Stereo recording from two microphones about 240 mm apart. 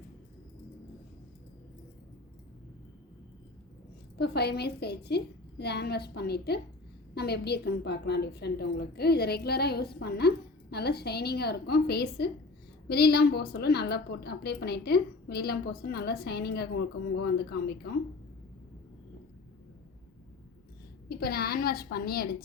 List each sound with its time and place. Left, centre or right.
4.2 s a woman's voice: left
21.1 s a woman's voice: left